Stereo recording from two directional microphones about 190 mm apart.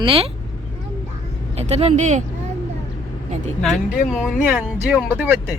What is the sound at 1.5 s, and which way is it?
Speech, 35° right (ahead or behind).